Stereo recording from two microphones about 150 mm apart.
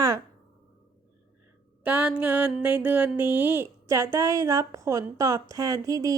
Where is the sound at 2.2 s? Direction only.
10° right (ahead or behind).